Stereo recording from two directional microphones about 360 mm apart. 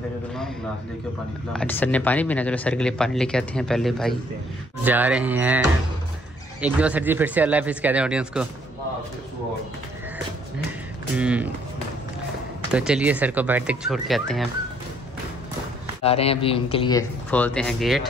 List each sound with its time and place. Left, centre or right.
1.5 s speech: centre
6.6 s speech: centre
11.1 s speech: centre
12.7 s speech: centre
16.0 s speech: centre